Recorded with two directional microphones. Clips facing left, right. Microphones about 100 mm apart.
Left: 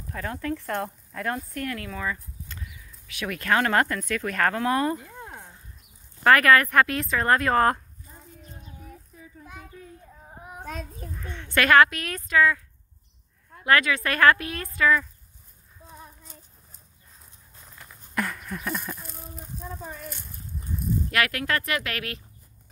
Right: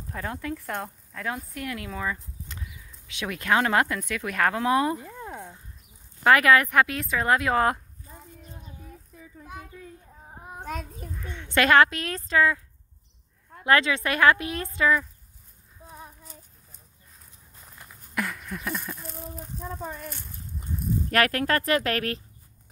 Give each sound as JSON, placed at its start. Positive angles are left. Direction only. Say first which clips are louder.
{"t": 0.1, "sound": "a woman's voice", "louder": "left 2 dB", "side_deg": -20}
{"t": 0.6, "sound": "speech", "louder": "left 3 dB", "side_deg": -10}
{"t": 6.2, "sound": "speech", "louder": "left 1 dB", "side_deg": -15}
{"t": 11.3, "sound": "a woman's voice", "louder": "left 1 dB", "side_deg": -20}
{"t": 13.7, "sound": "a woman's voice", "louder": "even", "side_deg": -25}
{"t": 15.9, "sound": "child singing", "louder": "right 2 dB", "side_deg": -10}
{"t": 18.1, "sound": "a sound", "louder": "left 1 dB", "side_deg": 0}
{"t": 21.1, "sound": "speech", "louder": "right 4 dB", "side_deg": -40}